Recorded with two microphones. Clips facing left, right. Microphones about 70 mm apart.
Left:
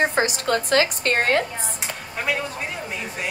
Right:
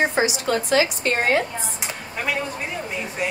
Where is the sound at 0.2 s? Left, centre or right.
Left.